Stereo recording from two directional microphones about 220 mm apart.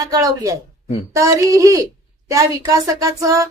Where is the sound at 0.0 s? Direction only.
15° right (ahead or behind).